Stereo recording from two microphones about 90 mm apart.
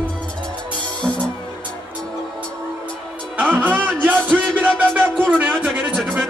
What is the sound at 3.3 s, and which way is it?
Music, 15° right (ahead or behind).